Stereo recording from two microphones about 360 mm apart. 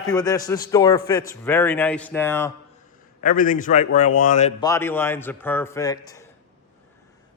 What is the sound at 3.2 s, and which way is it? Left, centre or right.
A man's voice, left.